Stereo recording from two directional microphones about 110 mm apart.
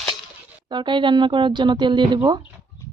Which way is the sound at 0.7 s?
45° right (ahead or behind).